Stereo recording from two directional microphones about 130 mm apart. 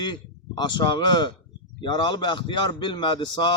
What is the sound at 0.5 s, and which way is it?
Speech, 35° left (ahead or behind).